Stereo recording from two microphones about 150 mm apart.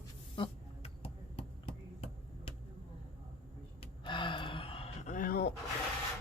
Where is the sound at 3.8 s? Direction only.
35° left (ahead or behind); by 5.5 s 90° left.